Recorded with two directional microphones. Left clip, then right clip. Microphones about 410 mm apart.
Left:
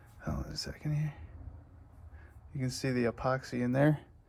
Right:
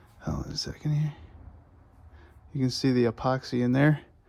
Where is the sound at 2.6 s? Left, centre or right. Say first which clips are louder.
Right 7 dB; centre.